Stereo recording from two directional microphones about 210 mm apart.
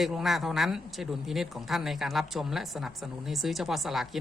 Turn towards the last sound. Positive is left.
turn(degrees=0)  # may be behind; listen again after turning